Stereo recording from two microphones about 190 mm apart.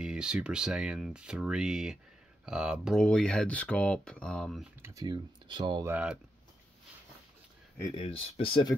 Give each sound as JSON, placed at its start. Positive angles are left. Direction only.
{"t": 0.0, "sound": "speech", "side_deg": -5}
{"t": 4.8, "sound": "speech", "side_deg": -20}
{"t": 5.9, "sound": "speech", "side_deg": -10}
{"t": 7.8, "sound": "speech", "side_deg": 25}